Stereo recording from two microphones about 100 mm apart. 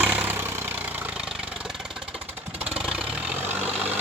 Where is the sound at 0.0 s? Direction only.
15° right (ahead or behind).